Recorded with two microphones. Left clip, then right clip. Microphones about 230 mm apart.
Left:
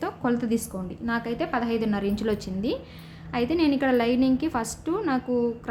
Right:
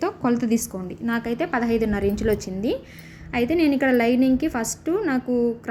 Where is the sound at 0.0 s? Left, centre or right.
Centre.